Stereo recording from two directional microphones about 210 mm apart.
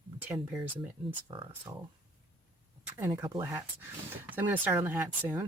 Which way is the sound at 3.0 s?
10° right (ahead or behind).